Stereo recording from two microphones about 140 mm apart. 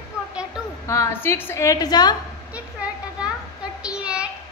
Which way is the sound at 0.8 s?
20° left (ahead or behind).